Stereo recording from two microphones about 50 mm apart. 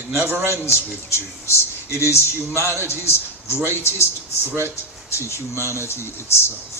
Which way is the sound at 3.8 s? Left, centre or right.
Left.